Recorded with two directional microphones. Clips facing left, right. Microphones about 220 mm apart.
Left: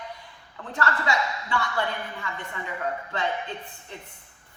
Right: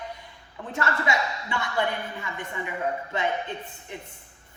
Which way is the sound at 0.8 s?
20° right (ahead or behind).